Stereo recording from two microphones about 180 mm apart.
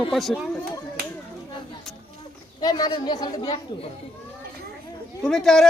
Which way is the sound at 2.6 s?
20° left (ahead or behind).